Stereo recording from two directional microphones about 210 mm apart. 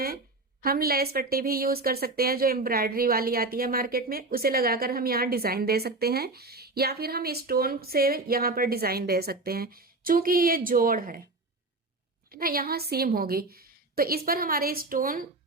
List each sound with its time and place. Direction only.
0.6 s speech: 45° right (ahead or behind)
12.3 s speech: 45° right (ahead or behind)